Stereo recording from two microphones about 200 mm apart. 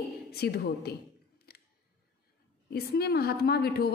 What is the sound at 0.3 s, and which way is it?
Speech, 55° left (ahead or behind).